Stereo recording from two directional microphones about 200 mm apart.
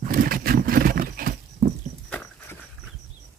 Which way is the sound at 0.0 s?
45° right (ahead or behind).